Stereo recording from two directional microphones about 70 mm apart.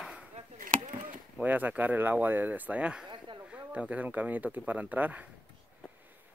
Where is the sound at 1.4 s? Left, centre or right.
Right.